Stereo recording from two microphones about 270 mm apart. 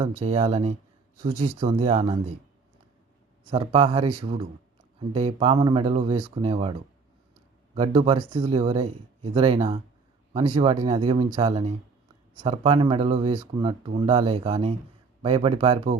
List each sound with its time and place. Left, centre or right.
0.0 s speech: centre
3.4 s speech: centre